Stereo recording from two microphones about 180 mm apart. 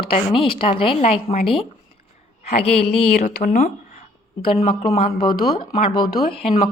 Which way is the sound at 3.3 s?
60° left (ahead or behind).